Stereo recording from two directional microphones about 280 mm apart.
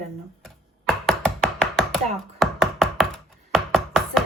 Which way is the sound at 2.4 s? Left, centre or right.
Centre.